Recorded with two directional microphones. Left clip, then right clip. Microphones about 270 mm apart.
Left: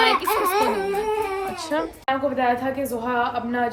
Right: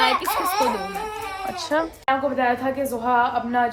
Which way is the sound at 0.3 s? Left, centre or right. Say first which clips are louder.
Left 2 dB; left.